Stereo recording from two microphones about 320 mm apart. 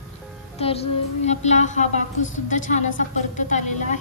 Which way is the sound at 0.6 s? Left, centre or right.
Centre.